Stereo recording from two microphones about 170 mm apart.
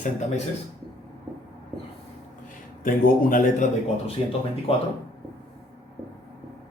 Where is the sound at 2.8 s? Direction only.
55° left (ahead or behind).